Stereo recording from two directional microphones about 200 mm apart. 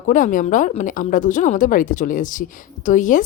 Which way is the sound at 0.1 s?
40° left (ahead or behind).